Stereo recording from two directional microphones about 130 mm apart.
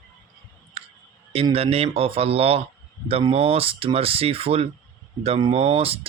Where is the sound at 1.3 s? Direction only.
50° right (ahead or behind).